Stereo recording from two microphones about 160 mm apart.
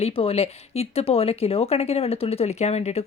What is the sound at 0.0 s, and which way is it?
Speech, 40° left (ahead or behind).